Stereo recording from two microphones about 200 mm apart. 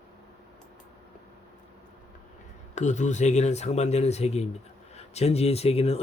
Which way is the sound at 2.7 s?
35° left (ahead or behind).